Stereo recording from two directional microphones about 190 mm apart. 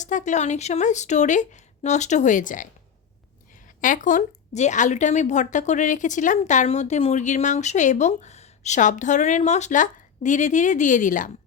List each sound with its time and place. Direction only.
0.0 s speech: 40° left (ahead or behind)
3.8 s speech: 45° left (ahead or behind)